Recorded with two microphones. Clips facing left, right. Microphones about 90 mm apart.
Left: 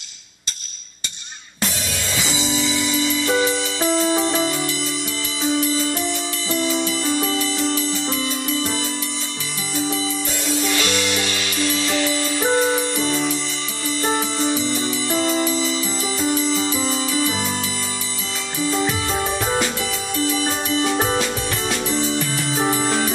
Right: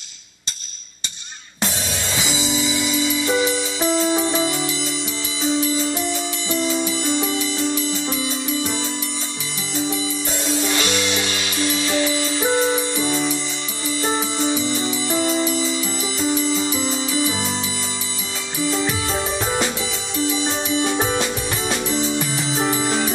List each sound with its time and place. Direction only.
2.1 s music: 20° right (ahead or behind)
10.4 s music: 25° right (ahead or behind)
12.4 s music: 20° left (ahead or behind)
12.8 s music: 15° right (ahead or behind)
20.2 s music: 20° right (ahead or behind)
22.6 s music: 15° left (ahead or behind)